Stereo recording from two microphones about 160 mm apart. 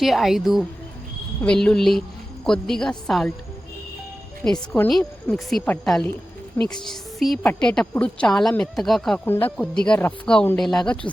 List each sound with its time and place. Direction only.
0.0 s a woman's voice: centre (ahead or behind)
4.4 s a woman's voice: 5° left (ahead or behind)